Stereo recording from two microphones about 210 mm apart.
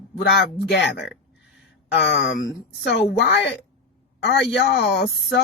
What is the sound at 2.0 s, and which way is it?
A woman's voice, 50° left (ahead or behind).